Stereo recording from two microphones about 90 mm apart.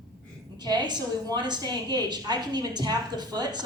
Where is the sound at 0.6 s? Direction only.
50° right (ahead or behind).